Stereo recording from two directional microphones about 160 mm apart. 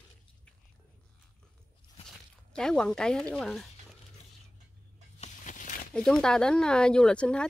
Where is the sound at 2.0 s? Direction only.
5° left (ahead or behind).